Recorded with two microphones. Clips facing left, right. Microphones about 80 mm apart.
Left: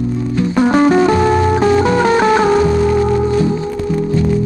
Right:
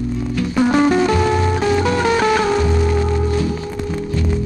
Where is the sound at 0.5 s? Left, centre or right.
Centre.